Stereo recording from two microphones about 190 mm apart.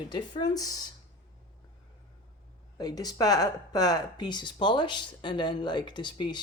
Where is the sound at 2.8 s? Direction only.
20° left (ahead or behind).